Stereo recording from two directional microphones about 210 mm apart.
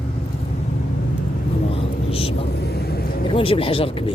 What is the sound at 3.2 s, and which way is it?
Speech, 25° left (ahead or behind).